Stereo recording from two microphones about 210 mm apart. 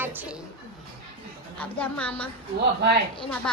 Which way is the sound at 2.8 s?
50° right (ahead or behind).